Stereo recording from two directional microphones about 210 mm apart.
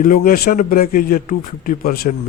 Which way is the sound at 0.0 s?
40° left (ahead or behind).